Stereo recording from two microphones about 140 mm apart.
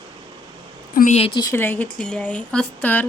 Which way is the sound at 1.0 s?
80° left.